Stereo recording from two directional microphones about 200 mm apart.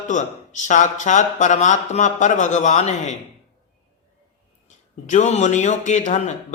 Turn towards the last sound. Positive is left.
turn(degrees=35)  # may be behind; listen again after turning